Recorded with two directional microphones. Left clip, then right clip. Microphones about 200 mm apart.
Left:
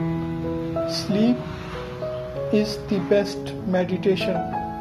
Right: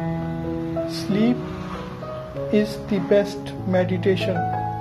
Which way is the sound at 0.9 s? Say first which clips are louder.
Right 1 dB; 15° right (ahead or behind).